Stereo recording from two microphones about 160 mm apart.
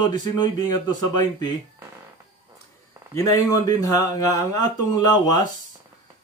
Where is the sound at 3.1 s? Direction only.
20° left (ahead or behind).